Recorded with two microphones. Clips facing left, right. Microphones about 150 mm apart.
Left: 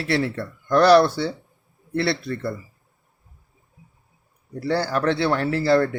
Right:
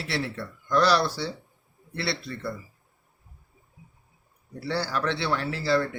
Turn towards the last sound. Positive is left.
turn(degrees=50)  # may be behind; listen again after turning